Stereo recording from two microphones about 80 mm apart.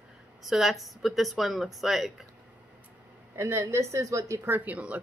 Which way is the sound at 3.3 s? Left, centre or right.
Right.